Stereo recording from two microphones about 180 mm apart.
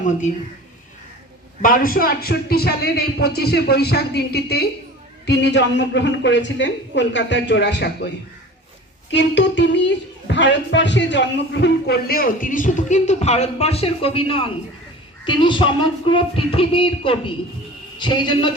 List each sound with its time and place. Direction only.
1.6 s a woman's voice: 50° left (ahead or behind); by 8.1 s 75° left (ahead or behind)
9.1 s a woman's voice: 80° left; by 14.5 s 30° left (ahead or behind)
15.2 s a sound: 25° left (ahead or behind)